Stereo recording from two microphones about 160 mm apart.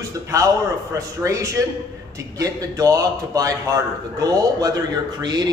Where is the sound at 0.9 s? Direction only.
20° right (ahead or behind).